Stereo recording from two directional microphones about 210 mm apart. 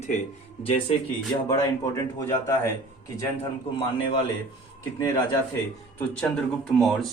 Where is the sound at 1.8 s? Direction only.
15° left (ahead or behind).